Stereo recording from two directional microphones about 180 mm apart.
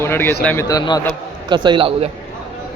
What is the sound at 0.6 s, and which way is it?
Speech, 20° left (ahead or behind).